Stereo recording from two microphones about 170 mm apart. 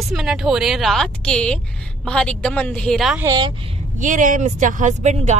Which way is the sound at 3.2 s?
20° right (ahead or behind).